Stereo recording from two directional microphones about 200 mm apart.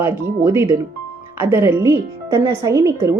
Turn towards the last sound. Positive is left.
turn(degrees=-15)  # may be behind; listen again after turning